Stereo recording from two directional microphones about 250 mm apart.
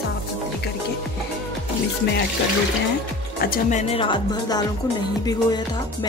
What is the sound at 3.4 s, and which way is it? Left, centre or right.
Speech, left.